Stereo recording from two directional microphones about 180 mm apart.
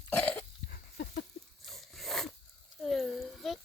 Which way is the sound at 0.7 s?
55° left (ahead or behind).